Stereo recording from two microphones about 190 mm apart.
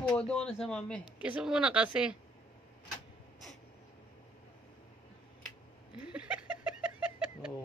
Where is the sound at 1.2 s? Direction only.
5° right (ahead or behind).